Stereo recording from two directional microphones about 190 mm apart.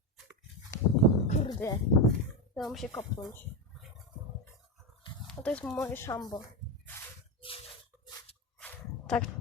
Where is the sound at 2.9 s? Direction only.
15° left (ahead or behind).